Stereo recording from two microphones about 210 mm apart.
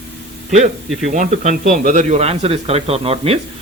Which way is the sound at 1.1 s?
35° right (ahead or behind).